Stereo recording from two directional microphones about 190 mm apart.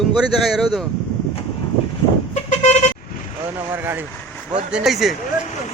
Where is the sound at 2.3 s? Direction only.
35° left (ahead or behind).